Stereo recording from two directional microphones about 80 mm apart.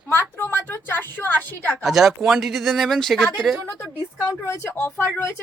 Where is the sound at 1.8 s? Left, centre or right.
Centre.